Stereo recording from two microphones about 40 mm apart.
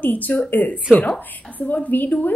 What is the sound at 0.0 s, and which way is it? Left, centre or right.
A woman's voice, left.